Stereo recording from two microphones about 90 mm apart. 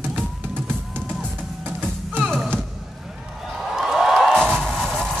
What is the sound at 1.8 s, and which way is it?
Music, 15° right (ahead or behind).